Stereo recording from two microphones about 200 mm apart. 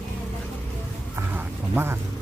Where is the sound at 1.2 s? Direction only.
10° right (ahead or behind).